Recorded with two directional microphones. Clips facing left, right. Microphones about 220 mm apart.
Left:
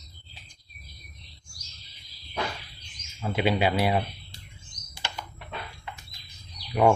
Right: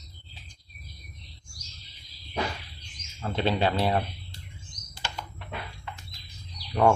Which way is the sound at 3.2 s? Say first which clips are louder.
Left 1 dB; 10° left (ahead or behind).